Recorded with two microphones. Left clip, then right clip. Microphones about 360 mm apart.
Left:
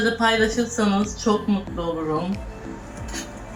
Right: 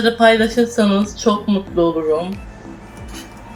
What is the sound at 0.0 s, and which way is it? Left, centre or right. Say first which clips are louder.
Speech: right 7 dB; centre.